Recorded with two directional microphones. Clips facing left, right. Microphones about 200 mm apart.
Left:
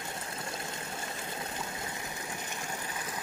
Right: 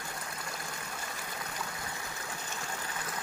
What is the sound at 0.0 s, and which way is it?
Water, 25° left (ahead or behind).